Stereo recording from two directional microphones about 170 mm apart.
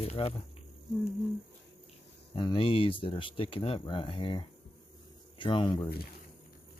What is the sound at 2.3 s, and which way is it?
Speech, 30° left (ahead or behind).